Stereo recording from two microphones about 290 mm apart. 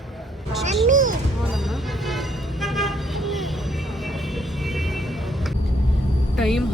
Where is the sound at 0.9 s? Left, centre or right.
Right.